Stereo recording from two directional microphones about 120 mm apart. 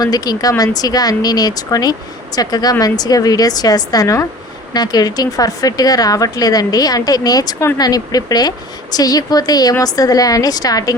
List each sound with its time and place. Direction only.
0.0 s speech: 35° left (ahead or behind)